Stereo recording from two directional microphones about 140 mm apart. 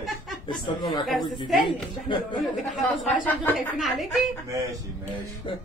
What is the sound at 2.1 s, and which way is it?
Speech, 35° left (ahead or behind).